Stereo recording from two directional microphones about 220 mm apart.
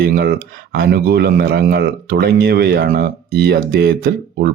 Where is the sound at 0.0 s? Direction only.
45° right (ahead or behind).